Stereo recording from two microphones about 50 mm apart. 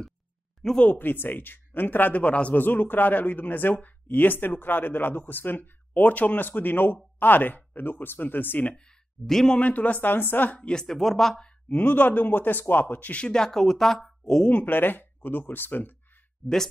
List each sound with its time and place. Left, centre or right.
0.6 s speech: centre
0.9 s speech: left
2.5 s speech: left
8.7 s speech: centre
9.6 s speech: left
10.6 s speech: centre
11.7 s speech: left
13.2 s speech: centre
14.5 s speech: left